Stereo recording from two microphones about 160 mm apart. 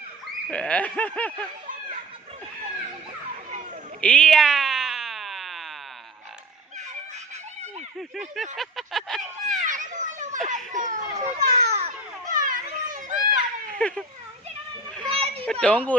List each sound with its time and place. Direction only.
0.5 s speech: 10° left (ahead or behind)
4.0 s a sound: 5° left (ahead or behind)
8.4 s a sound: centre (ahead or behind)
9.5 s children playing: 55° right (ahead or behind)
11.2 s a child's voice: 40° right (ahead or behind)
12.3 s children playing: 55° right (ahead or behind)
13.7 s speech: 5° left (ahead or behind)
15.1 s children playing: 40° right (ahead or behind)
15.6 s speech: 10° left (ahead or behind)